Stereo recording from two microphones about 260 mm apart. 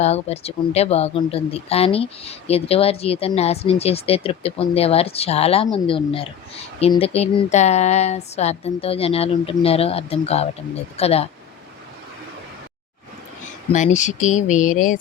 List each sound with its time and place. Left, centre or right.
0.0 s speech: left
13.7 s speech: left